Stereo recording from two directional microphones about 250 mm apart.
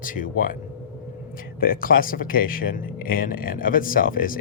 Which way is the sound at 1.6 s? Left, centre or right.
Left.